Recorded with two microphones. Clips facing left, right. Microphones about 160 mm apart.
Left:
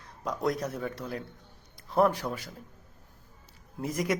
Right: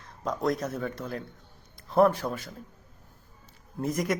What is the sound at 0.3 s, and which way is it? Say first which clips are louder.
Speech: right 2 dB; 10° left (ahead or behind).